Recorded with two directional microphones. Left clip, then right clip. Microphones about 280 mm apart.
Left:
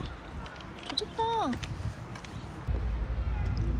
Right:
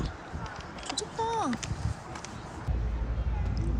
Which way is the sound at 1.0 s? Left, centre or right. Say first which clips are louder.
Left 1 dB; centre.